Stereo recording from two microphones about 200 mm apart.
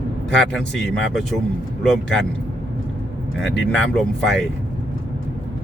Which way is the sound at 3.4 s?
65° left (ahead or behind).